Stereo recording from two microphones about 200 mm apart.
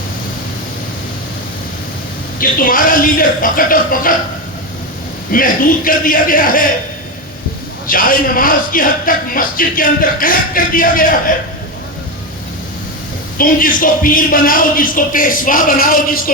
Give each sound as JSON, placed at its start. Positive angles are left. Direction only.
{"t": 2.4, "sound": "a man's voice", "side_deg": 45}
{"t": 5.3, "sound": "a man's voice", "side_deg": 45}
{"t": 7.9, "sound": "a man's voice", "side_deg": 45}
{"t": 13.4, "sound": "a man's voice", "side_deg": 45}